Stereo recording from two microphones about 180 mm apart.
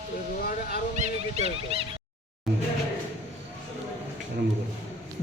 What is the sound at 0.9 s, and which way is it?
Music, 40° right (ahead or behind).